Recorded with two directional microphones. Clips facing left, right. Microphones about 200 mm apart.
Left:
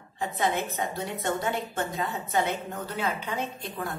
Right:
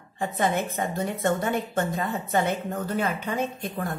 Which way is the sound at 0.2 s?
50° right (ahead or behind).